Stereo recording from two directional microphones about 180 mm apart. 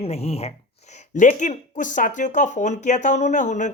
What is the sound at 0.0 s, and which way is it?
Speech, 35° left (ahead or behind).